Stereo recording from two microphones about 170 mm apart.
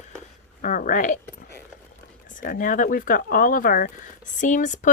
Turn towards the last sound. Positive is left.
turn(degrees=45)  # may be behind; listen again after turning